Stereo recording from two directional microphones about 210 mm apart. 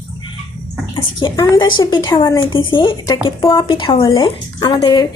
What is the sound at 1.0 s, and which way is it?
A woman's voice, 20° left (ahead or behind).